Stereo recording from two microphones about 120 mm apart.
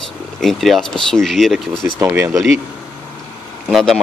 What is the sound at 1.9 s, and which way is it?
Speech, 20° right (ahead or behind).